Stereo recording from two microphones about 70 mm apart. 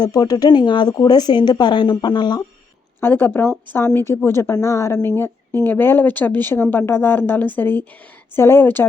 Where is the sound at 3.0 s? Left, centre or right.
Left.